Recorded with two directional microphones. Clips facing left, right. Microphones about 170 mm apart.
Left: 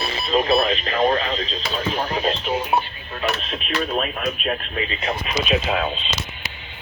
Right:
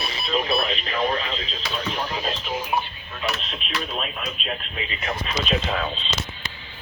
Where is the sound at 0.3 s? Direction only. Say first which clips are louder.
Left 6 dB; 45° left (ahead or behind).